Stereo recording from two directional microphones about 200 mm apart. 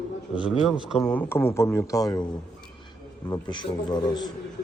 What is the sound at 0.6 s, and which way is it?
Speech, centre (ahead or behind).